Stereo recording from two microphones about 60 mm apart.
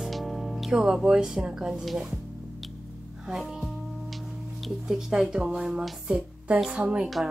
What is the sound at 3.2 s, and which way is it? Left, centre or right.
Music, centre.